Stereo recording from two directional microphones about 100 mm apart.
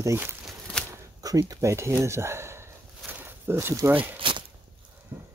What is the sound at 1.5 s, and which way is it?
Speech, 30° right (ahead or behind).